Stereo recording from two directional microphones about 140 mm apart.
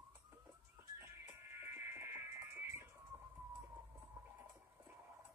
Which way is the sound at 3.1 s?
15° right (ahead or behind).